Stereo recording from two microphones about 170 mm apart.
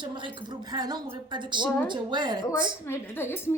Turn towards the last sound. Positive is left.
turn(degrees=15)  # may be behind; listen again after turning